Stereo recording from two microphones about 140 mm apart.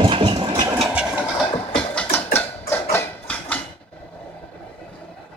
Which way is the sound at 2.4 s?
15° left (ahead or behind).